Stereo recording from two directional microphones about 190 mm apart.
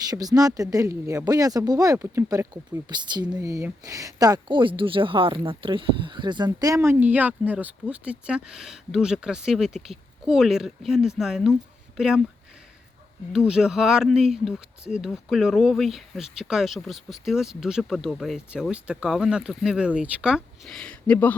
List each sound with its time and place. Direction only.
0.1 s speech: 20° right (ahead or behind); by 12.2 s centre (ahead or behind)
13.5 s speech: 5° right (ahead or behind)